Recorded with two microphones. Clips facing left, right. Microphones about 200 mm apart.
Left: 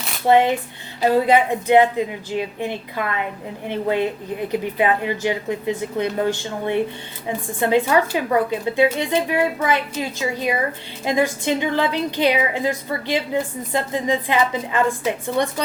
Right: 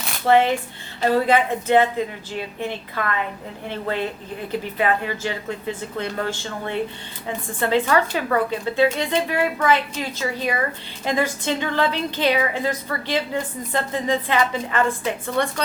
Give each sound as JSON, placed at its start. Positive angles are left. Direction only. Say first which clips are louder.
{"t": 0.3, "sound": "a woman's voice", "louder": "left 1 dB", "side_deg": 20}